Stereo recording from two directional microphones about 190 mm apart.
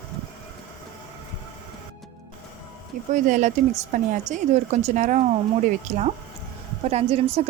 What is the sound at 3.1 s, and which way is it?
A woman's voice, 40° right (ahead or behind).